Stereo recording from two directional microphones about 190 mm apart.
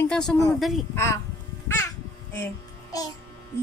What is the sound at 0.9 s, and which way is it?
Speech, 15° left (ahead or behind).